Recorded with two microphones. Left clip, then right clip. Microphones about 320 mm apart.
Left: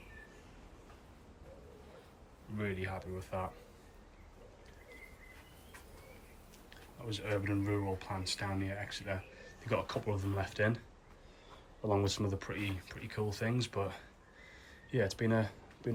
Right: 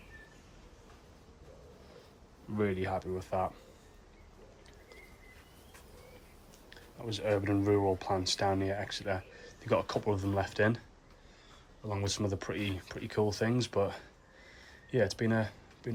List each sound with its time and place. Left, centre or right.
2.6 s speech: centre
7.0 s speech: centre
11.9 s speech: centre